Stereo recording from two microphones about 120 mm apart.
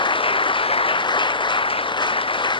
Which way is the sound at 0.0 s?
45° left (ahead or behind).